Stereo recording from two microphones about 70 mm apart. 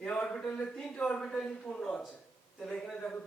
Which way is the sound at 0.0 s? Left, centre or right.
Centre.